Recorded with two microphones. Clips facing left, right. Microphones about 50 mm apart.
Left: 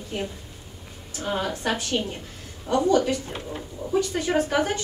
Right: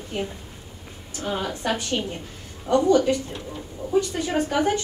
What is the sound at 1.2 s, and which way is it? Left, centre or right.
Speech, centre.